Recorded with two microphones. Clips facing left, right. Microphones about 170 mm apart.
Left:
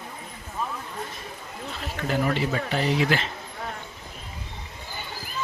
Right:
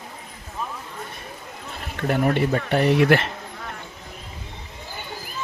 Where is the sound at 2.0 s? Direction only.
55° right (ahead or behind).